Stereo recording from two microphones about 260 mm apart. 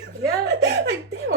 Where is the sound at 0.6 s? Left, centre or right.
Right.